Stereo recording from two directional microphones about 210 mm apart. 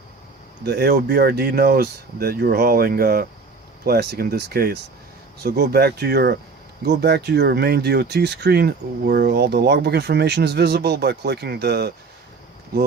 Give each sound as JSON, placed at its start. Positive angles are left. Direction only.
{"t": 0.6, "sound": "speech", "side_deg": -50}